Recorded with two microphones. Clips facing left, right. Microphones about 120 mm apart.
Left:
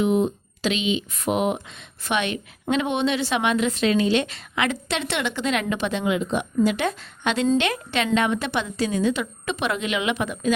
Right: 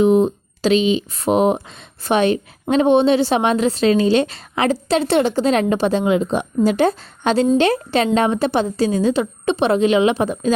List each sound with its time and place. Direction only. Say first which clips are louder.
0.0 s a woman's voice: right 7 dB; 35° right (ahead or behind)